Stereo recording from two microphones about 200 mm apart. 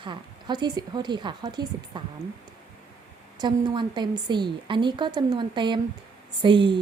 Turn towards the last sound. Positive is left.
turn(degrees=-25)  # may be behind; listen again after turning